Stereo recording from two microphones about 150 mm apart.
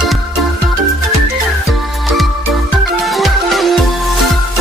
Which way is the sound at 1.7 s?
Centre (ahead or behind).